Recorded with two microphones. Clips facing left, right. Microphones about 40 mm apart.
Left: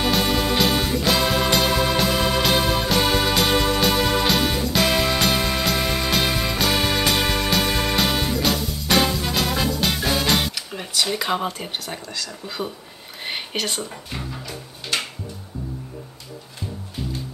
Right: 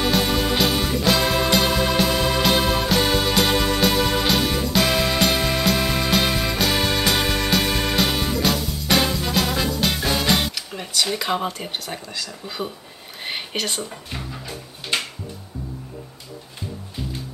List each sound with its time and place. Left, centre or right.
0.0 s music: centre
13.2 s speech: centre
14.9 s a sound: right